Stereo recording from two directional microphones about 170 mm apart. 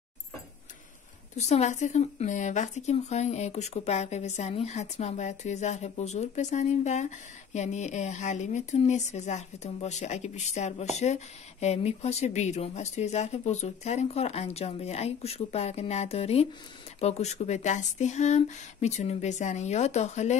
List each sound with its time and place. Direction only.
1.3 s speech: 40° left (ahead or behind)